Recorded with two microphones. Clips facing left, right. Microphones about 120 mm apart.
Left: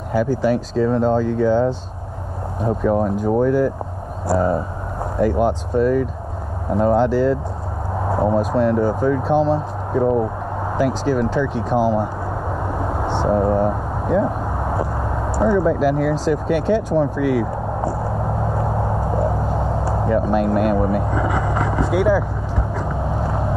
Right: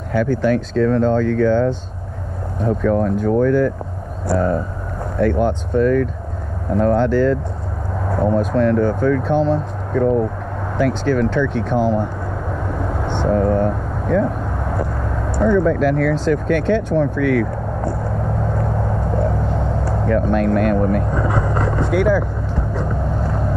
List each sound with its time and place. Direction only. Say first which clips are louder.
0.1 s speech: right 1 dB; 5° left (ahead or behind)
2.6 s speech: right 1 dB; 10° left (ahead or behind)
9.9 s speech: right 1 dB; 15° left (ahead or behind)
12.7 s vehicle: left 1 dB; 5° left (ahead or behind)
15.3 s speech: right 1 dB; 10° left (ahead or behind)
17.2 s vehicle: right 1 dB; 5° left (ahead or behind)
19.0 s a sound: even; 5° left (ahead or behind)
22.8 s vehicle: right 1 dB; 10° left (ahead or behind)